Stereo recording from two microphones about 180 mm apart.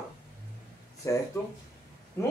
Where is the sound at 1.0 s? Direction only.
20° left (ahead or behind).